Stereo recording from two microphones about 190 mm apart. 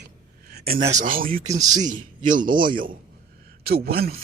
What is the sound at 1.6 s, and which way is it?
Speech, 20° right (ahead or behind).